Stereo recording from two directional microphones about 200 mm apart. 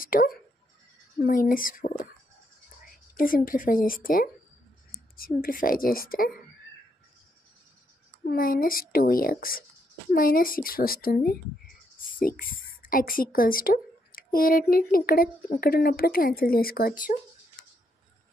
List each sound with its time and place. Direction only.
0.0 s speech: 45° left (ahead or behind)
3.2 s speech: 45° left (ahead or behind)
8.3 s speech: 45° left (ahead or behind)